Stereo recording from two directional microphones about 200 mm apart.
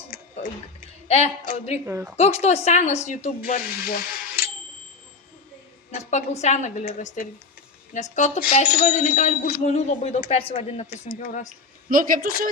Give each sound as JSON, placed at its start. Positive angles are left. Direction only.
{"t": 1.0, "sound": "speech", "side_deg": 30}
{"t": 1.9, "sound": "a woman's voice", "side_deg": -10}
{"t": 2.1, "sound": "speech", "side_deg": 30}
{"t": 3.2, "sound": "speech", "side_deg": 45}
{"t": 5.9, "sound": "a sound", "side_deg": 35}
{"t": 6.4, "sound": "speech", "side_deg": 35}
{"t": 11.9, "sound": "speech", "side_deg": -45}